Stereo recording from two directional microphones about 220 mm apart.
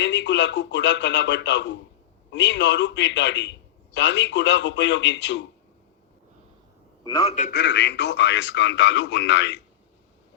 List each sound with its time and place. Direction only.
0.0 s speech: 50° left (ahead or behind)
7.0 s a man's voice: 20° left (ahead or behind)
7.5 s a man's voice: 50° left (ahead or behind)